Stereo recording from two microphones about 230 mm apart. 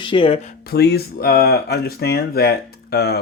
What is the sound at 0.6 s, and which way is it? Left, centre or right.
Speech, left.